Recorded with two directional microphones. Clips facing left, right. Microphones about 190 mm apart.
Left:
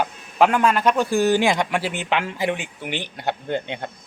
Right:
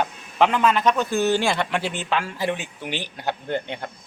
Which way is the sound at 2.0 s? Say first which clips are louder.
Left 2 dB; 20° left (ahead or behind).